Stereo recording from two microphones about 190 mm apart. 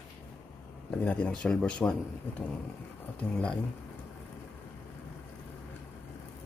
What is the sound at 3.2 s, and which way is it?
Speech, 5° left (ahead or behind).